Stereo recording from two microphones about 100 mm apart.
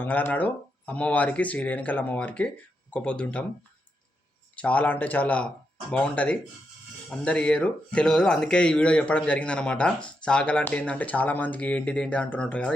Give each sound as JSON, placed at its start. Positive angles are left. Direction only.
{"t": 0.0, "sound": "speech", "side_deg": 20}
{"t": 4.5, "sound": "speech", "side_deg": 15}